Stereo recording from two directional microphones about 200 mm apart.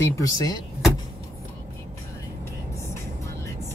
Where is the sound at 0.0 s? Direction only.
15° left (ahead or behind).